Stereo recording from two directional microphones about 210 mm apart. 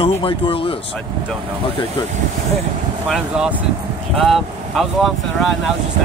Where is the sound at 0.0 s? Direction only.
25° left (ahead or behind).